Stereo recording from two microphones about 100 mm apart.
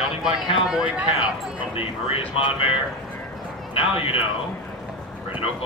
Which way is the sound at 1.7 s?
65° left (ahead or behind).